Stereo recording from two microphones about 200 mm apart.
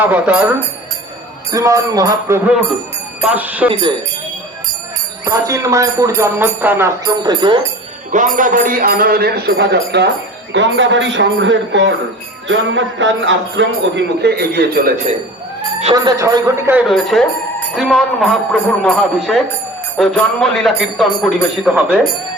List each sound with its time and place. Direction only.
0.0 s speech: 5° right (ahead or behind)
5.2 s speech: 15° right (ahead or behind)
8.1 s a man's voice: 40° right (ahead or behind)
16.0 s speech: 15° right (ahead or behind)
16.9 s speech: centre (ahead or behind)